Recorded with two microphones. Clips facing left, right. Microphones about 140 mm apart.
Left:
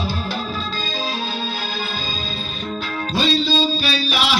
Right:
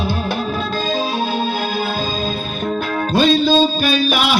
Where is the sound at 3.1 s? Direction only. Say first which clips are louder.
Right 6 dB; 50° right (ahead or behind).